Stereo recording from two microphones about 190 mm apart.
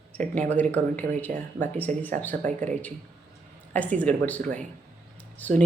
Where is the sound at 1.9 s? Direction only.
40° right (ahead or behind).